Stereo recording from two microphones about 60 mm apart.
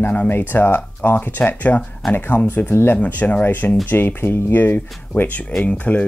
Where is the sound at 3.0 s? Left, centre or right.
Left.